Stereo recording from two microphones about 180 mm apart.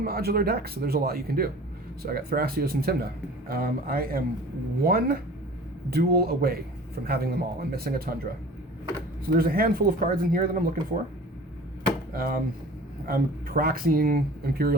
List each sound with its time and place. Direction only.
0.0 s a man's voice: 60° right (ahead or behind)
12.1 s a man's voice: 55° right (ahead or behind)